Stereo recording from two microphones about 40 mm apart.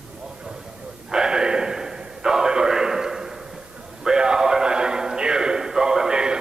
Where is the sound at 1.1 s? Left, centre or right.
Centre.